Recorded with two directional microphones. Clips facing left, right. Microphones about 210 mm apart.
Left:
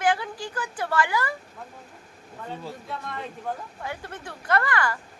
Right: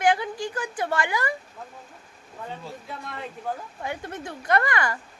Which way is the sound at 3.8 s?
20° right (ahead or behind).